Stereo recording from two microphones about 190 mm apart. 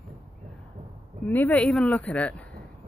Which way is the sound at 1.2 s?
10° left (ahead or behind).